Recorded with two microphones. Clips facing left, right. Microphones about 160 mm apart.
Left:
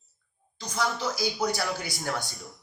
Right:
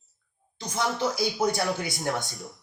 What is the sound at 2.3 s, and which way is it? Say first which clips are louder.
Speech: right 3 dB; centre (ahead or behind).